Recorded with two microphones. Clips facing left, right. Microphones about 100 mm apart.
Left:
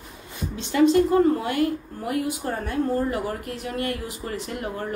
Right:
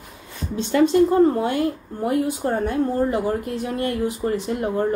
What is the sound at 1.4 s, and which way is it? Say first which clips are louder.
Speech: right 2 dB; 30° right (ahead or behind).